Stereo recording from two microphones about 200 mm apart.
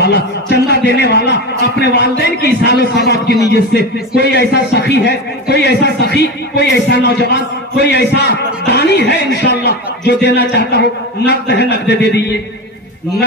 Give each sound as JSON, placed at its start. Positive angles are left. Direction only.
{"t": 0.0, "sound": "a man's voice", "side_deg": 55}